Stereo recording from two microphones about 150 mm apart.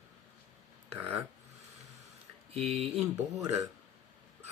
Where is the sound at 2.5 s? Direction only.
45° right (ahead or behind).